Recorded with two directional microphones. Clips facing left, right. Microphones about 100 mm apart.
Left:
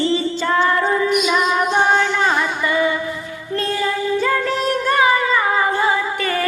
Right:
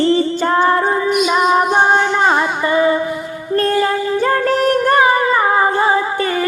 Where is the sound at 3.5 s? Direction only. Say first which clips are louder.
Right 6 dB; 50° right (ahead or behind).